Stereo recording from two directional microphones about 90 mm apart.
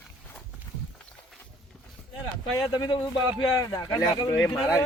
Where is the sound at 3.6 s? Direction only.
40° left (ahead or behind).